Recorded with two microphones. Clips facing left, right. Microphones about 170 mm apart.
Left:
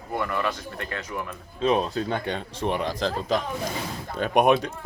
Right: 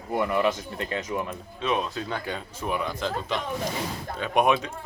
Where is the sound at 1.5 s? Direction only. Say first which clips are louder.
Left 5 dB; 35° left (ahead or behind).